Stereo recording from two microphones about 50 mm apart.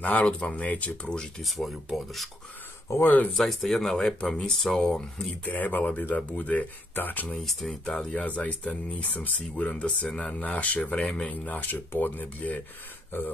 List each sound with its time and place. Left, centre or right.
0.0 s speech: left
1.4 s speech: centre
2.9 s speech: left
3.3 s speech: centre
5.4 s speech: left
7.0 s speech: left
7.4 s speech: centre
8.1 s speech: left